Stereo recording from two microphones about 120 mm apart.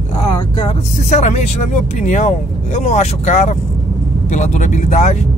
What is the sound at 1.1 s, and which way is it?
Speech, 70° left (ahead or behind).